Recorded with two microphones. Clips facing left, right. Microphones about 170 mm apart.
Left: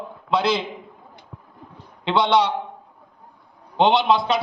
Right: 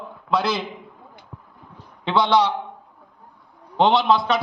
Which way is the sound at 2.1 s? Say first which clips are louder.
Even; 25° left (ahead or behind).